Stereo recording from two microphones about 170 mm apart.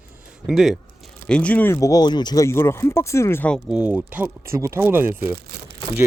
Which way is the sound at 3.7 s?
5° right (ahead or behind).